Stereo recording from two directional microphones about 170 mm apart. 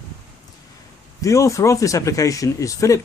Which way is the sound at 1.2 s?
20° left (ahead or behind).